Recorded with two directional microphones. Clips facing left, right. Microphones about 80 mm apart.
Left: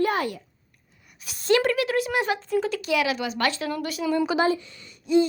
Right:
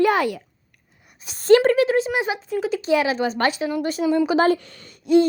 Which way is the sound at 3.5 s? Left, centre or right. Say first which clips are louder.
Right 4 dB; centre.